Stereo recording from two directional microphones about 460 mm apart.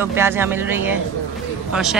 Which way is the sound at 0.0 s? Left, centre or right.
Centre.